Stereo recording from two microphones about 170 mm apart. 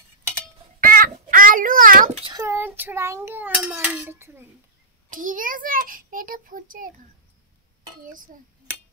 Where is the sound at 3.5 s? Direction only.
5° right (ahead or behind).